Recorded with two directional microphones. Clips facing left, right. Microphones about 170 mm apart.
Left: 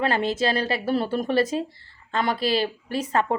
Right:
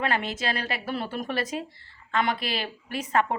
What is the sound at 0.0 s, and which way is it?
Speech, 30° left (ahead or behind).